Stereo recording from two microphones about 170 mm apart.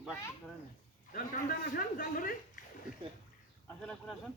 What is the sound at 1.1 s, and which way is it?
A man's voice, 55° left (ahead or behind).